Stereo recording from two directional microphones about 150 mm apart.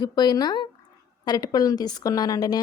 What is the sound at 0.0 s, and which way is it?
A woman's voice, 30° left (ahead or behind).